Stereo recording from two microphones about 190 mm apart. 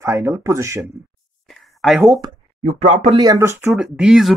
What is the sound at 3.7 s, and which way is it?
Speech, 5° right (ahead or behind).